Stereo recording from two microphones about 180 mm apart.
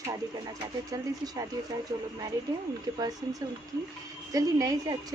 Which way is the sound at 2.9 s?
25° right (ahead or behind).